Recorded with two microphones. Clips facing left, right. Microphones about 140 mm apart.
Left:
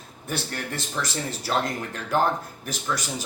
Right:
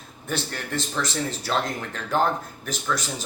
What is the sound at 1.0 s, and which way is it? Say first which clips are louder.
Speech: right 2 dB; 10° left (ahead or behind).